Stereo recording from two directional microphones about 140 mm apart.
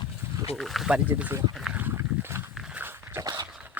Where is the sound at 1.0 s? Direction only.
15° right (ahead or behind).